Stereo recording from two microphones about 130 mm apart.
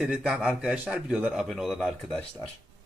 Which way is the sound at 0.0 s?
5° right (ahead or behind).